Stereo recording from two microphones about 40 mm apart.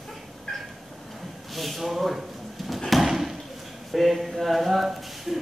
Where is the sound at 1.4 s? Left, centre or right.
Centre.